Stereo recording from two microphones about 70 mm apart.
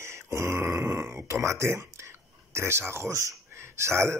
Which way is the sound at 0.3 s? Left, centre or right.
Right.